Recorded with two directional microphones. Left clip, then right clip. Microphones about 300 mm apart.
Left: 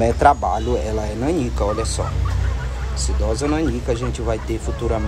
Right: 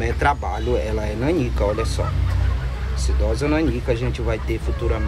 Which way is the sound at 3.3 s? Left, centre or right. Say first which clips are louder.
Even; centre.